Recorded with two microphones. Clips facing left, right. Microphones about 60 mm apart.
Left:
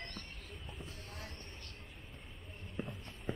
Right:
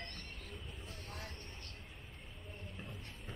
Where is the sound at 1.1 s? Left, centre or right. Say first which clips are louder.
Right 1 dB; right.